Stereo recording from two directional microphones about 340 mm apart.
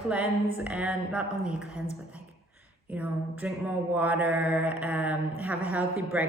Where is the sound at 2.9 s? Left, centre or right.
Centre.